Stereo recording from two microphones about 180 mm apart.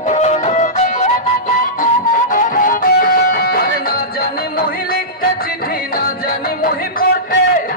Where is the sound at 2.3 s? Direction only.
50° left (ahead or behind).